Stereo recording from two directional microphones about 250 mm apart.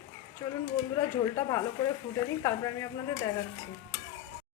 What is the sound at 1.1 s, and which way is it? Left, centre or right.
Speech, centre.